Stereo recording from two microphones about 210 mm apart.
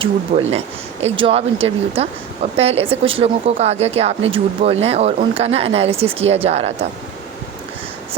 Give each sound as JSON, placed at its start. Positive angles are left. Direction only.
{"t": 0.0, "sound": "speech", "side_deg": -25}